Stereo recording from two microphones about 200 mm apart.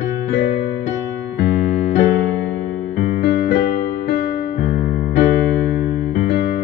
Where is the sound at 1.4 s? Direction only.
35° left (ahead or behind).